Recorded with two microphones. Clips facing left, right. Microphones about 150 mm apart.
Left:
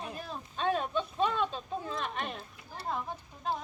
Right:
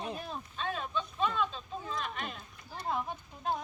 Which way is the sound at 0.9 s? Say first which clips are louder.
Left 2 dB; 30° left (ahead or behind).